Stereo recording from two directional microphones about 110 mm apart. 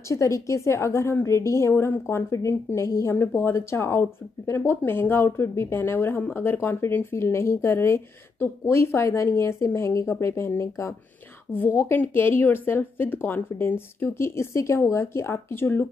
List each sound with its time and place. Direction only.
0.1 s speech: 25° left (ahead or behind)